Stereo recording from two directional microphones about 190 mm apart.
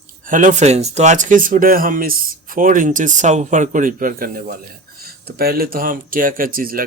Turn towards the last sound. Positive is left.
turn(degrees=-50)  # may be behind; listen again after turning